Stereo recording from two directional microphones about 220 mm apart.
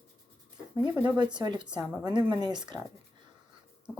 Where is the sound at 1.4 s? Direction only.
20° right (ahead or behind).